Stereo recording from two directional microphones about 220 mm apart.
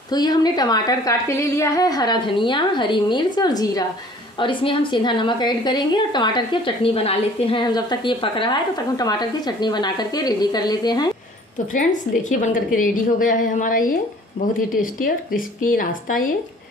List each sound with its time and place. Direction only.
0.1 s a woman's voice: 20° left (ahead or behind)
11.7 s a woman's voice: 35° left (ahead or behind)